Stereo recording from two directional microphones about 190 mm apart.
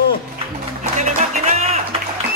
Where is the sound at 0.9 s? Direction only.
40° right (ahead or behind).